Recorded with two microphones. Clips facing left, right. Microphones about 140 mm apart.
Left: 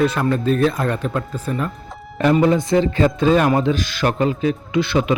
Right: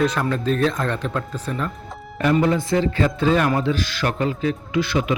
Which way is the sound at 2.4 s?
20° left (ahead or behind).